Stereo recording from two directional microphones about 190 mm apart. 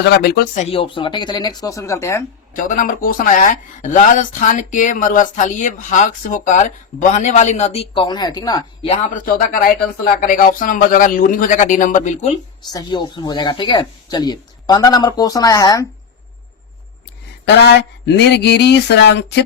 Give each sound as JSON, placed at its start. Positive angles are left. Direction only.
{"t": 0.0, "sound": "speech", "side_deg": 60}
{"t": 0.6, "sound": "speech", "side_deg": 30}
{"t": 2.6, "sound": "speech", "side_deg": 45}
{"t": 9.2, "sound": "a man's voice", "side_deg": 45}
{"t": 12.7, "sound": "speech", "side_deg": 20}
{"t": 17.5, "sound": "speech", "side_deg": 60}